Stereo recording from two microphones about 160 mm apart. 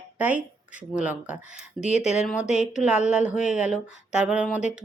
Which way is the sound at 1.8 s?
Centre (ahead or behind).